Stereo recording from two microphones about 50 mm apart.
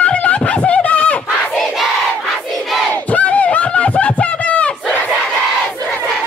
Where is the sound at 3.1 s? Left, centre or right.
Left.